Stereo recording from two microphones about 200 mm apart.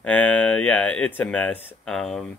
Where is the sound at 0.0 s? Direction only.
5° left (ahead or behind).